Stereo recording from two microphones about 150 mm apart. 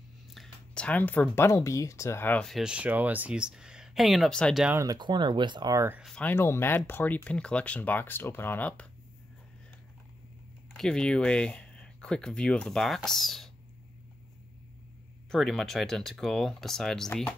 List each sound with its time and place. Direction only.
0.3 s speech: 5° left (ahead or behind)
4.6 s speech: 20° right (ahead or behind)
6.0 s speech: 5° left (ahead or behind)
6.3 s speech: 15° left (ahead or behind)
10.7 s speech: 5° left (ahead or behind)
15.3 s speech: centre (ahead or behind)